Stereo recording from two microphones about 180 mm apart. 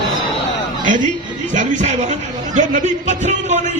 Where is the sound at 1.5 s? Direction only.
40° right (ahead or behind).